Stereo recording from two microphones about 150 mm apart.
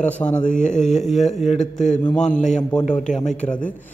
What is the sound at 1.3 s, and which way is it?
Speech, 50° left (ahead or behind).